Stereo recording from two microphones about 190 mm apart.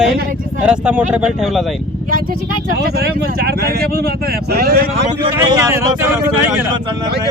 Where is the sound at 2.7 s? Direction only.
55° right (ahead or behind).